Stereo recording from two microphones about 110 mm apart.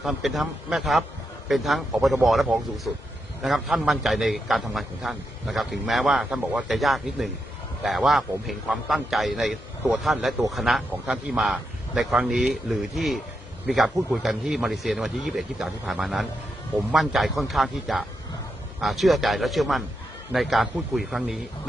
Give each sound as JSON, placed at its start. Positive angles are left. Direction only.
{"t": 0.0, "sound": "a man's voice", "side_deg": 0}